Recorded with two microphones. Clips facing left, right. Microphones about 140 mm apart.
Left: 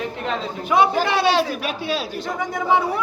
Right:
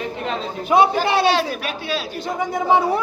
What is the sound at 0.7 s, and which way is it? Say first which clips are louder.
A man's voice: right 2 dB; 30° right (ahead or behind).